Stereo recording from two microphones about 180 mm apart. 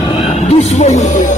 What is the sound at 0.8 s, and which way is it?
Music, 40° left (ahead or behind).